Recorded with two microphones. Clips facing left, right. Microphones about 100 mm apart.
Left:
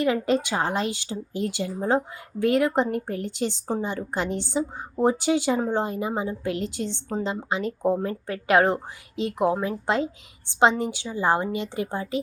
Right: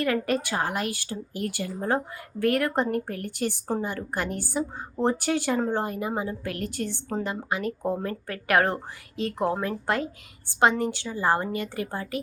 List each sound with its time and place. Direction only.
0.0 s a woman's voice: 20° left (ahead or behind)